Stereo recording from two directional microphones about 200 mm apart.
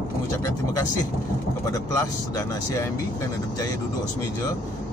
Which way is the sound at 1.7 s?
15° left (ahead or behind).